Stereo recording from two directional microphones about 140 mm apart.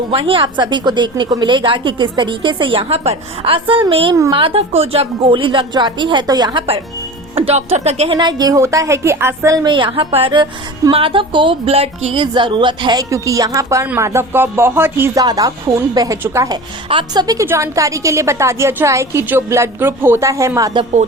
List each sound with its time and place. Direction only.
0.1 s a woman's voice: 40° right (ahead or behind)
4.1 s a woman's voice: 25° right (ahead or behind)
4.4 s a woman's voice: 40° right (ahead or behind)
7.3 s speech: 45° right (ahead or behind)
8.1 s a woman's voice: 30° right (ahead or behind)
9.6 s a woman's voice: 35° right (ahead or behind); by 15.2 s 15° right (ahead or behind)
15.2 s a woman's voice: 30° right (ahead or behind)
16.9 s a woman's voice: 30° right (ahead or behind)
17.4 s a woman's voice: 20° right (ahead or behind)